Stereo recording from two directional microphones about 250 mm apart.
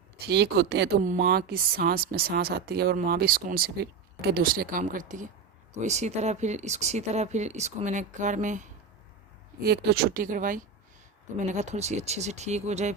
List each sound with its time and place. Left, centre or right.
0.3 s speech: right